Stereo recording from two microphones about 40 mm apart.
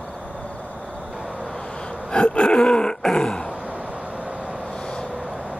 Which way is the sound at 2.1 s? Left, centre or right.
Left.